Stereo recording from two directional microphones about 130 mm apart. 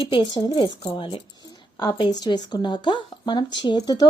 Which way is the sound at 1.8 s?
30° left (ahead or behind).